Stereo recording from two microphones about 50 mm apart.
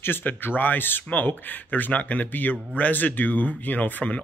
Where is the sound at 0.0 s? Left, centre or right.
Left.